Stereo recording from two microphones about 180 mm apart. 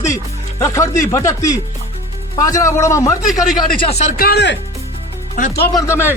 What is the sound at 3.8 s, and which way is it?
Speech, 35° left (ahead or behind).